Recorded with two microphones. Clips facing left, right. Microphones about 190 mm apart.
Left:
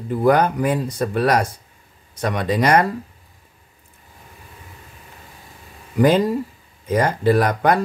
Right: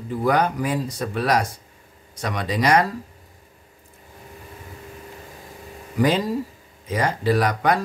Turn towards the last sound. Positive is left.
turn(degrees=55)  # may be behind; listen again after turning